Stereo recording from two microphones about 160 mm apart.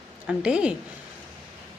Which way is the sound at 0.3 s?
5° right (ahead or behind).